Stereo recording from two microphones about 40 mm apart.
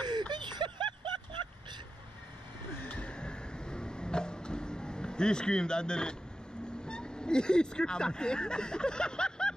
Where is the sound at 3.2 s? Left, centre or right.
Left.